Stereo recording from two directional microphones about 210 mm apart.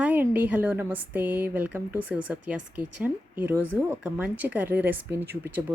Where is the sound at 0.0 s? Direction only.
10° right (ahead or behind).